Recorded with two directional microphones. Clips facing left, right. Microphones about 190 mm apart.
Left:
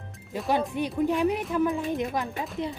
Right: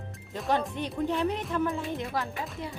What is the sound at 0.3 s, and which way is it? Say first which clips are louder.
A woman's voice: left 3 dB; 5° left (ahead or behind).